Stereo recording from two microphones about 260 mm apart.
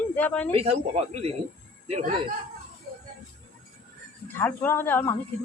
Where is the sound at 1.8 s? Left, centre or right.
Right.